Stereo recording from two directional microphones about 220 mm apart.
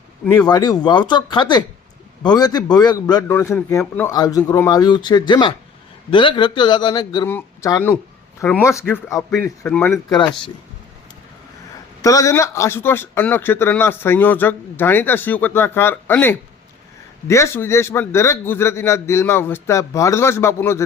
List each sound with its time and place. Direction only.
0.3 s speech: 20° left (ahead or behind)
10.1 s speech: 20° left (ahead or behind)
12.0 s speech: 15° left (ahead or behind)